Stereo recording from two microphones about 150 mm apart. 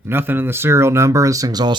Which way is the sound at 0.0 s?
15° right (ahead or behind).